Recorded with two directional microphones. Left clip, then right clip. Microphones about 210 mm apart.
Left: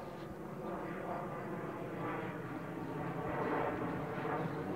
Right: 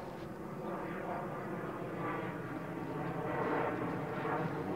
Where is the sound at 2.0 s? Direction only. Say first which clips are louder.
Right 2 dB; 15° right (ahead or behind).